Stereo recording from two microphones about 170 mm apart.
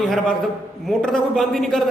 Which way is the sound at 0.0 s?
5° left (ahead or behind).